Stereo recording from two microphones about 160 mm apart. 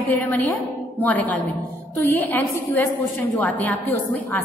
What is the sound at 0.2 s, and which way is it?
A woman's voice, 15° left (ahead or behind).